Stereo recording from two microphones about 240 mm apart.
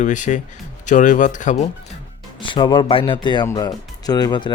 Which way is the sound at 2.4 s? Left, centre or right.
Centre.